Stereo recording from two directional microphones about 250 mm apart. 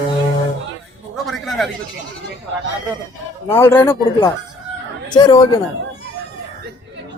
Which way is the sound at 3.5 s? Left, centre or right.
Centre.